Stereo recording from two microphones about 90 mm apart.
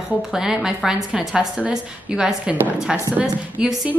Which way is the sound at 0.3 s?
5° right (ahead or behind).